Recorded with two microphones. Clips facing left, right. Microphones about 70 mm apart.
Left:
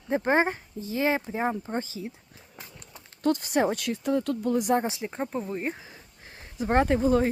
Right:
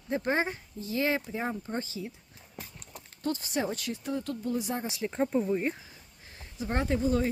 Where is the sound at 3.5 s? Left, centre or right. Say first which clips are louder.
Left 6 dB; left.